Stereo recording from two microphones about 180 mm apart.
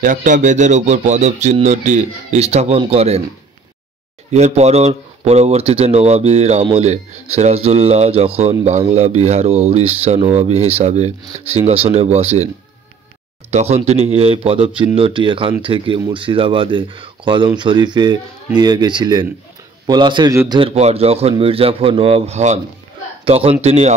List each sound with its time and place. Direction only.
0.0 s speech: 45° right (ahead or behind)
4.3 s speech: 35° right (ahead or behind)
13.5 s speech: 35° right (ahead or behind)